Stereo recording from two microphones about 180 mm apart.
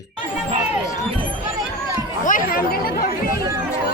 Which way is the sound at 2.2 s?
50° left (ahead or behind).